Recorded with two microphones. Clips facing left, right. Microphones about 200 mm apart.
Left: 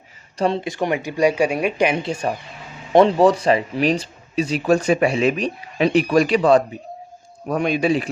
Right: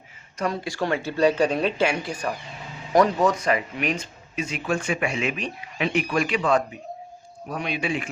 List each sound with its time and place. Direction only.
0.3 s speech: 25° left (ahead or behind)
7.5 s speech: 45° left (ahead or behind)